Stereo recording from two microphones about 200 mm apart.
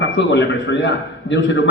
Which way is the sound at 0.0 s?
65° left (ahead or behind).